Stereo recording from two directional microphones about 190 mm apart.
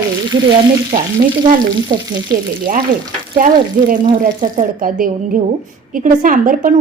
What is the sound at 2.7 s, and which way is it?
A woman's voice, 45° right (ahead or behind).